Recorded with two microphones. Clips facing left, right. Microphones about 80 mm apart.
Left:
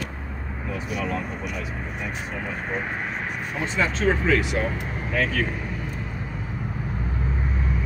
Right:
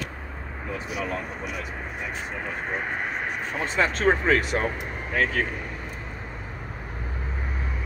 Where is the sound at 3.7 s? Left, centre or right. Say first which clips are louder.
Right 1 dB; right.